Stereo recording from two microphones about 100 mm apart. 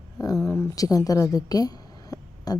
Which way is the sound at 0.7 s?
35° left (ahead or behind).